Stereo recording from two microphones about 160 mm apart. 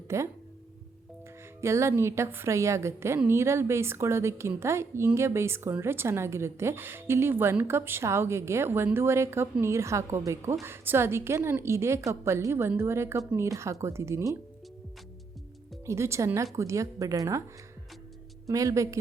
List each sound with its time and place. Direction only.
0.1 s a woman's voice: 20° right (ahead or behind)
1.6 s a woman's voice: 15° right (ahead or behind)
15.9 s a woman's voice: 15° right (ahead or behind)
18.4 s a woman's voice: 20° right (ahead or behind)